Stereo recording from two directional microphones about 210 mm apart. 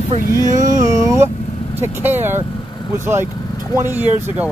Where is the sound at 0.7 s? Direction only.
15° right (ahead or behind).